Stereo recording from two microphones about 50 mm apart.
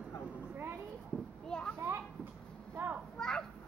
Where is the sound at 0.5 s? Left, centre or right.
Right.